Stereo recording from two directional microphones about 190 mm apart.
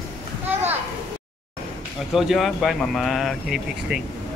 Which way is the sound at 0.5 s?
10° right (ahead or behind).